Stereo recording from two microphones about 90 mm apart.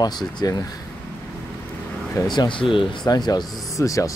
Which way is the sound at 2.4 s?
70° left (ahead or behind).